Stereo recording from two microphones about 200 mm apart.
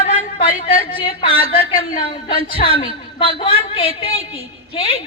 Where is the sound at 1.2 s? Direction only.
45° left (ahead or behind).